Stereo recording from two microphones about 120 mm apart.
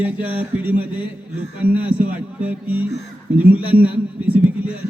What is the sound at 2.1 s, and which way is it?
A man's voice, 10° right (ahead or behind).